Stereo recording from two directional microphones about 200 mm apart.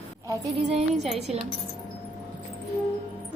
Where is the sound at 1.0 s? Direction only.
Centre (ahead or behind).